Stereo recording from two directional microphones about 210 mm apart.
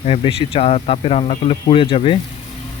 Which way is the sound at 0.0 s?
25° left (ahead or behind).